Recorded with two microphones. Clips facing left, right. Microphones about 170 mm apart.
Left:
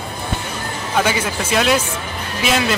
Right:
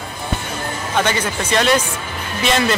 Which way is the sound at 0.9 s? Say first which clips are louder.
Left 1 dB; 5° left (ahead or behind).